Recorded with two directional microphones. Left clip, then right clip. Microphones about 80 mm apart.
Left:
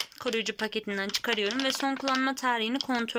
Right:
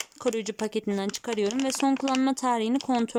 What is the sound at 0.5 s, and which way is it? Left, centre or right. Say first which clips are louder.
Speech: right 2 dB; right.